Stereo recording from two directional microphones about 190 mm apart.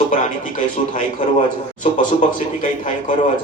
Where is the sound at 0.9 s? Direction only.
40° left (ahead or behind).